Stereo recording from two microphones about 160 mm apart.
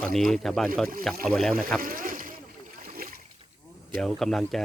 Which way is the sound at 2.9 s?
65° right (ahead or behind).